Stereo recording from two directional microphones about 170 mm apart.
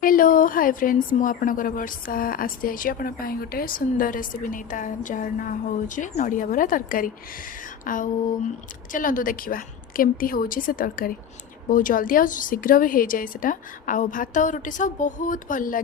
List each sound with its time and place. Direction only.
0.0 s a woman's voice: 55° left (ahead or behind)